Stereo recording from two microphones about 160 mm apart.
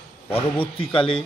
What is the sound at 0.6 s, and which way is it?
Speech, 35° left (ahead or behind).